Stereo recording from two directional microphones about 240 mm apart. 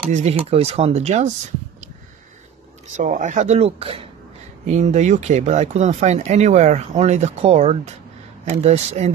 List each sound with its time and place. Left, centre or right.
0.1 s speech: right
3.0 s speech: right